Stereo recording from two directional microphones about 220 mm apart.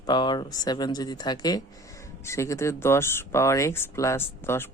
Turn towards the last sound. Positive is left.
turn(degrees=10)  # may be behind; listen again after turning